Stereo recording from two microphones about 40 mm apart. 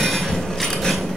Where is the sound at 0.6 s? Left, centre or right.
Centre.